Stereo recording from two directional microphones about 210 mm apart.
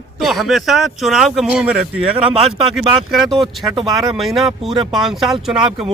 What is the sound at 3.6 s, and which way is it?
Speech, 20° right (ahead or behind).